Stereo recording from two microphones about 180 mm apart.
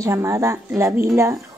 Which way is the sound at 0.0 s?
15° right (ahead or behind).